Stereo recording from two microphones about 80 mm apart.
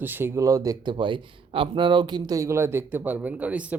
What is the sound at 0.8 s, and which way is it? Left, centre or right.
Speech, right.